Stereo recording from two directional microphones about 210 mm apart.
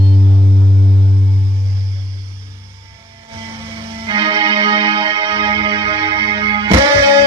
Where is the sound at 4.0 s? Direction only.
20° right (ahead or behind).